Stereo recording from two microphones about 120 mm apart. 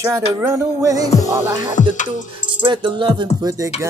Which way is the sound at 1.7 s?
90° left.